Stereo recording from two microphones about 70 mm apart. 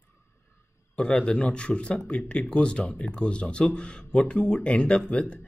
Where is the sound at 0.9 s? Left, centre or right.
Centre.